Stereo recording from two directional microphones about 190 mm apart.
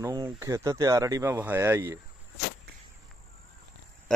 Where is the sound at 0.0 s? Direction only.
20° right (ahead or behind).